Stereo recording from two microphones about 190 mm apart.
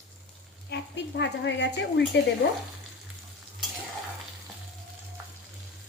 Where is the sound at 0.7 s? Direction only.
65° left (ahead or behind).